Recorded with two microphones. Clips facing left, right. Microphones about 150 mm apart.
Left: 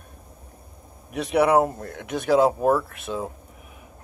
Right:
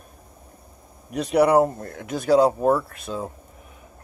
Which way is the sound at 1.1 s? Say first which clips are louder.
Right 2 dB; centre (ahead or behind).